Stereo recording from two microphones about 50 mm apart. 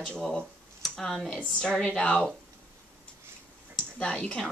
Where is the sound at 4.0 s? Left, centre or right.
Centre.